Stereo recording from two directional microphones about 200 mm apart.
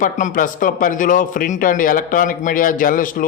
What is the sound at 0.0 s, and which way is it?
A man's voice, 40° left (ahead or behind).